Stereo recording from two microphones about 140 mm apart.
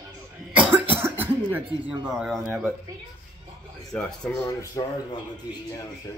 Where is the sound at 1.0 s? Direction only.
15° right (ahead or behind).